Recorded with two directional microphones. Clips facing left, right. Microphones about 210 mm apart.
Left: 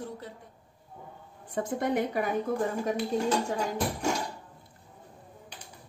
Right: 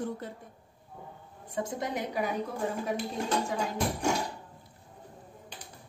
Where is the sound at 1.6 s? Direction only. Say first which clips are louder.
Left 9 dB; 55° left (ahead or behind).